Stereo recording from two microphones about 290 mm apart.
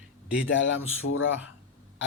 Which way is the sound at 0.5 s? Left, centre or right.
Left.